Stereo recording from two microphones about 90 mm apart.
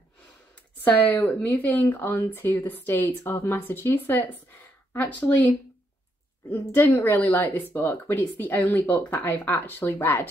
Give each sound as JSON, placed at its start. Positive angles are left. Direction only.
{"t": 0.7, "sound": "speech", "side_deg": 20}
{"t": 6.7, "sound": "speech", "side_deg": 20}